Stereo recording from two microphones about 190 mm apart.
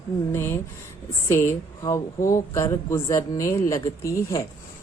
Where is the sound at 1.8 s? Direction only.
15° left (ahead or behind).